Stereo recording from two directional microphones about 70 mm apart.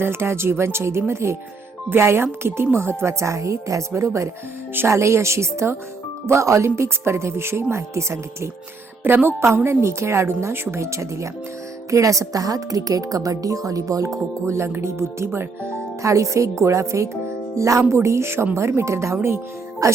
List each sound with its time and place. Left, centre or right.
0.0 s a woman's voice: right
9.0 s a woman's voice: right
19.8 s speech: right